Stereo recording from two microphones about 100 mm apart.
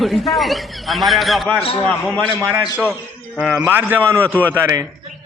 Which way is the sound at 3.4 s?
5° right (ahead or behind).